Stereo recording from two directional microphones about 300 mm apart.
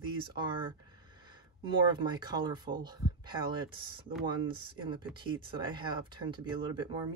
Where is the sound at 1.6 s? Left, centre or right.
Centre.